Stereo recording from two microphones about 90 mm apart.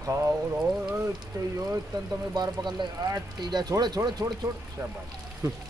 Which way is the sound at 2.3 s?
50° right (ahead or behind).